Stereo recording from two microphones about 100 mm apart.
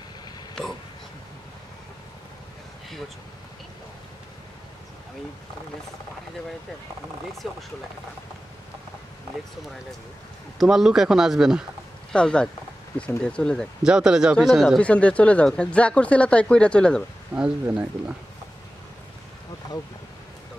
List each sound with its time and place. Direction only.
0.6 s a sound: 10° left (ahead or behind)
7.4 s speech: centre (ahead or behind)
10.6 s speech: 5° right (ahead or behind)
12.1 s speech: 10° left (ahead or behind)
13.8 s speech: 5° right (ahead or behind)
14.8 s speech: 15° left (ahead or behind)
17.3 s speech: 15° right (ahead or behind)